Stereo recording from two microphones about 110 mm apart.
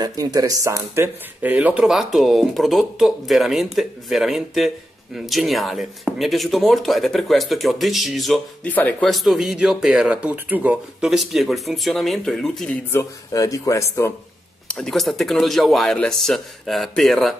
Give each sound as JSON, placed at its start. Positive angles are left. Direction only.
{"t": 0.0, "sound": "speech", "side_deg": -35}
{"t": 0.9, "sound": "speech", "side_deg": -20}
{"t": 1.9, "sound": "speech", "side_deg": 0}
{"t": 8.6, "sound": "speech", "side_deg": 15}
{"t": 9.0, "sound": "speech", "side_deg": 0}
{"t": 12.9, "sound": "speech", "side_deg": 30}
{"t": 14.7, "sound": "speech", "side_deg": 5}